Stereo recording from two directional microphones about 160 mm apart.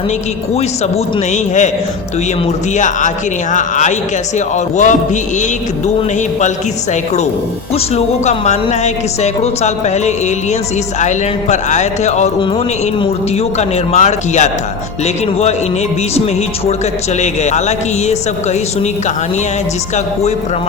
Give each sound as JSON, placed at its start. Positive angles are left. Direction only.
{"t": 0.5, "sound": "speech", "side_deg": 45}
{"t": 2.7, "sound": "speech", "side_deg": 50}
{"t": 7.9, "sound": "speech", "side_deg": 45}
{"t": 13.6, "sound": "speech", "side_deg": 45}
{"t": 17.2, "sound": "speech", "side_deg": 45}